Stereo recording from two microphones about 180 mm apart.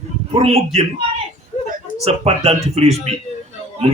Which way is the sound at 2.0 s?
35° right (ahead or behind).